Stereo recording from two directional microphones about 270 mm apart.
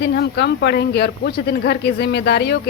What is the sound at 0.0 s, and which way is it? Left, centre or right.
Speech, left.